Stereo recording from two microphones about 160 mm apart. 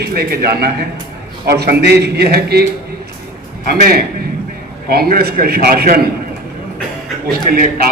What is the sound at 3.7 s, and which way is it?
A man's voice, 70° right (ahead or behind).